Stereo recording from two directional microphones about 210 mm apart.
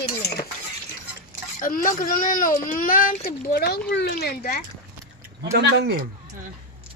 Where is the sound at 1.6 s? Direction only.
40° left (ahead or behind).